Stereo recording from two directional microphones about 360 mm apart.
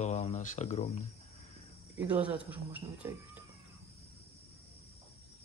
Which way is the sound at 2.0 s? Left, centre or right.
Centre.